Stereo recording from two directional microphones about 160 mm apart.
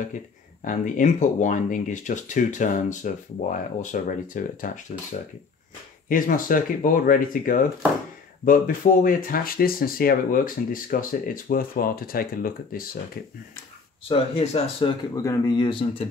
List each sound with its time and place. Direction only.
0.7 s speech: 55° left (ahead or behind)
14.0 s speech: 35° left (ahead or behind)
14.9 s speech: 20° left (ahead or behind)